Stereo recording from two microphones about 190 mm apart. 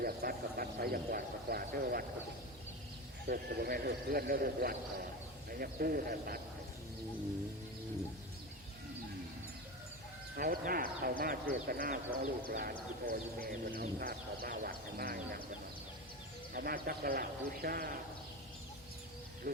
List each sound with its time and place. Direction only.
0.0 s speech: 50° right (ahead or behind)
3.2 s speech: 55° right (ahead or behind)
10.3 s speech: 50° right (ahead or behind)
16.6 s speech: 50° right (ahead or behind)